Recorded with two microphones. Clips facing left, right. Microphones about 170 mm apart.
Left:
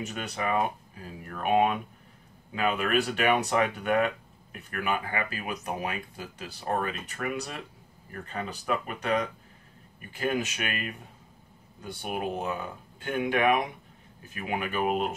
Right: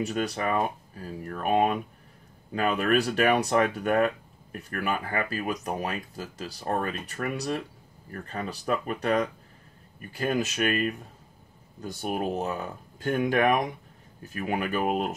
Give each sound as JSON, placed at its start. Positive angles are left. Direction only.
{"t": 0.0, "sound": "speech", "side_deg": -35}
{"t": 10.1, "sound": "speech", "side_deg": -40}